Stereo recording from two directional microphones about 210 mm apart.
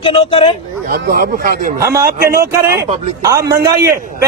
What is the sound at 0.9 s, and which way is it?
A man's voice, 45° right (ahead or behind).